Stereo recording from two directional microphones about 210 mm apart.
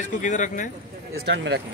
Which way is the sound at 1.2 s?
60° right (ahead or behind).